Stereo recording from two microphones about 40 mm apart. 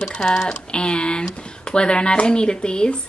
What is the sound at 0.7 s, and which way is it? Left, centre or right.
Speech, left.